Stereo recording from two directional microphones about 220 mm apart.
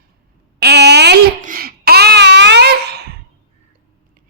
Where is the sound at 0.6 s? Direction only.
50° right (ahead or behind).